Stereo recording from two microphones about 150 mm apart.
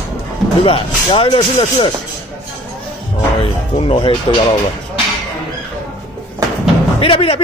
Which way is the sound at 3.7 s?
40° left (ahead or behind).